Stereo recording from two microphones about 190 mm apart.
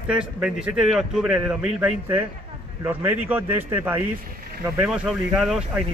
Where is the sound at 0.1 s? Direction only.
5° right (ahead or behind).